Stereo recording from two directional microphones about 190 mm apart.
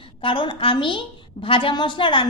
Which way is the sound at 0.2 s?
25° left (ahead or behind).